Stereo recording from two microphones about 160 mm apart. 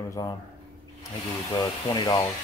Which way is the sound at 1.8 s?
25° left (ahead or behind).